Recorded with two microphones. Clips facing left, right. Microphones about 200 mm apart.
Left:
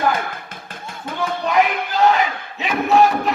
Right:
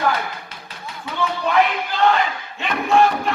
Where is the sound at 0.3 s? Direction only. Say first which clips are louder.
Left 2 dB; 50° left (ahead or behind).